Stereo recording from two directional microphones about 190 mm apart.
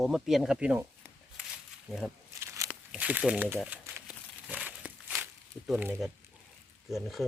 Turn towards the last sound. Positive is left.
turn(degrees=0)  # may be behind; listen again after turning